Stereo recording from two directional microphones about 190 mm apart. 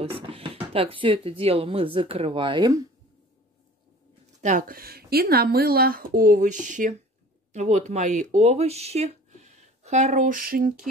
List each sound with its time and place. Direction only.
0.0 s speech: 30° right (ahead or behind)
4.4 s speech: 40° right (ahead or behind)